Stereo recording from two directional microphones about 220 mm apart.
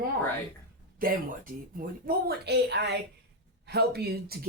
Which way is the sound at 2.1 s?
45° right (ahead or behind).